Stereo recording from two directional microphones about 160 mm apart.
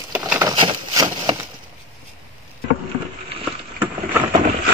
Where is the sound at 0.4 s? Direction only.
25° right (ahead or behind).